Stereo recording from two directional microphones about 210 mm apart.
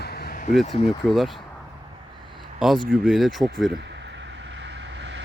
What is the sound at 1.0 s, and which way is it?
Speech, centre (ahead or behind).